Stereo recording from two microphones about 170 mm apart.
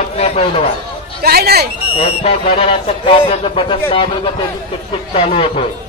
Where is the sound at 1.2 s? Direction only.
65° right (ahead or behind).